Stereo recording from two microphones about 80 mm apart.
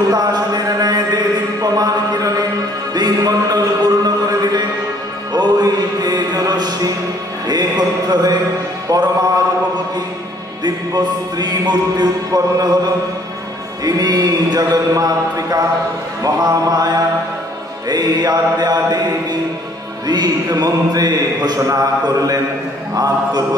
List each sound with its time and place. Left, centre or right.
0.1 s a sound: right
2.9 s music: right
7.4 s a sound: right
8.8 s music: right
10.6 s speech: right
13.8 s speech: right
20.1 s speech: right